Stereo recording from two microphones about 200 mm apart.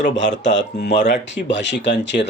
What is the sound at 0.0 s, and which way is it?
Speech, 65° left (ahead or behind).